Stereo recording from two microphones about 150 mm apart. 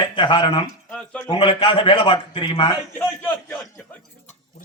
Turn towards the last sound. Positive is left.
turn(degrees=15)  # may be behind; listen again after turning